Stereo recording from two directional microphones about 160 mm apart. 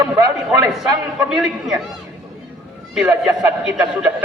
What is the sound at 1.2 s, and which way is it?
Speech, 5° right (ahead or behind).